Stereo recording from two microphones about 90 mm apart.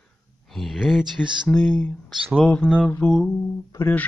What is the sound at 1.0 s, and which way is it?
Speech, 60° right (ahead or behind).